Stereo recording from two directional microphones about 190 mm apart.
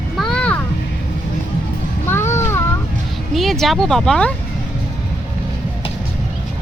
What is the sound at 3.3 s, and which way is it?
Speech, centre (ahead or behind).